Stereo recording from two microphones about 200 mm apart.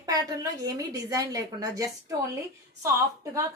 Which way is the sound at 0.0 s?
20° right (ahead or behind).